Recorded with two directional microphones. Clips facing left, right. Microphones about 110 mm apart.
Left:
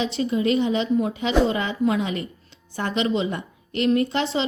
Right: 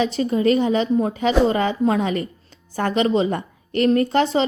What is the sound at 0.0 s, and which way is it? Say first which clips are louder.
A woman's voice: right 4 dB; 40° right (ahead or behind).